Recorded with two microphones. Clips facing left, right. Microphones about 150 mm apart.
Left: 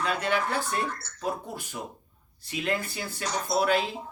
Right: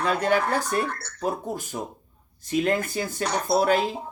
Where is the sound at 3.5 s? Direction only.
45° right (ahead or behind).